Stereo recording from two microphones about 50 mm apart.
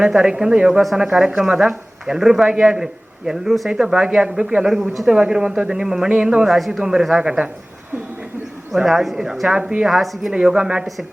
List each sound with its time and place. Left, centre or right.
0.0 s a woman's voice: centre
5.0 s a woman's voice: centre
8.7 s a woman's voice: centre
10.0 s speech: centre
10.3 s a woman's voice: centre